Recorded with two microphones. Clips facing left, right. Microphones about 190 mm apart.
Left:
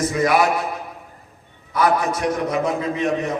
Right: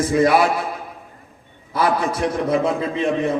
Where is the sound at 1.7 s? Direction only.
30° right (ahead or behind).